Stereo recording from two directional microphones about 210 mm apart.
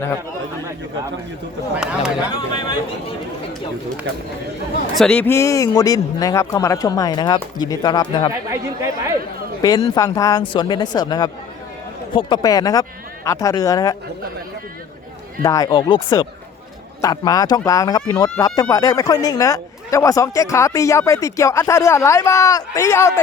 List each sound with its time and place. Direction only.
1.7 s speech: 5° right (ahead or behind)
2.3 s speech: 20° left (ahead or behind)
4.9 s speech: 5° left (ahead or behind)
8.3 s speech: 15° right (ahead or behind)
9.6 s speech: 15° left (ahead or behind)
15.4 s speech: 15° left (ahead or behind)